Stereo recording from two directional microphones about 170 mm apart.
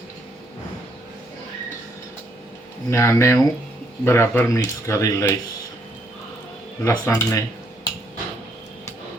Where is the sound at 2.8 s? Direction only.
15° left (ahead or behind).